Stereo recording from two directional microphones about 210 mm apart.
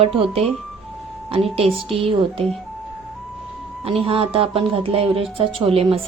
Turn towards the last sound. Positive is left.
turn(degrees=-25)  # may be behind; listen again after turning